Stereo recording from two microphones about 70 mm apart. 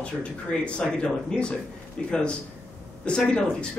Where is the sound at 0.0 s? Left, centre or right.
Centre.